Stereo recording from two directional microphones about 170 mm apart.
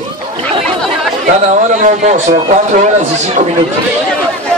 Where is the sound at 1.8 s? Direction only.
45° right (ahead or behind).